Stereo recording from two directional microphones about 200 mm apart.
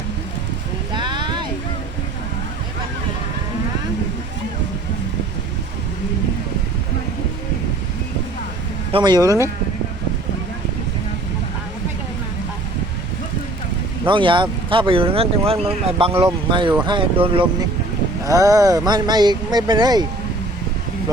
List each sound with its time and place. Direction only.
0.9 s boat: 25° right (ahead or behind)
8.9 s speech: 20° right (ahead or behind)
14.1 s speech: 25° right (ahead or behind)